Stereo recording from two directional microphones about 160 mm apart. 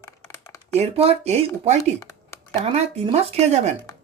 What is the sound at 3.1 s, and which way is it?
Speech, 40° right (ahead or behind).